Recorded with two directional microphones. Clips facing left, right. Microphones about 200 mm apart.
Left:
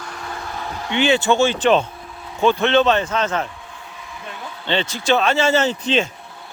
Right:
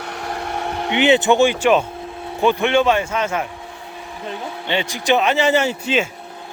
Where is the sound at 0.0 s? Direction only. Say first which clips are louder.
Right 4 dB; 65° right (ahead or behind).